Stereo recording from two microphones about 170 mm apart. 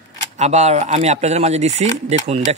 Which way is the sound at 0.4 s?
40° right (ahead or behind).